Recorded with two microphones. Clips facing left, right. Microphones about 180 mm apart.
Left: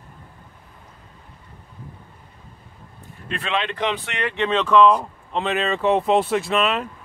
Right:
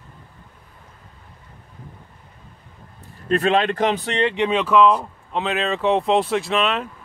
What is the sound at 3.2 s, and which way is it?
Speech, 40° right (ahead or behind).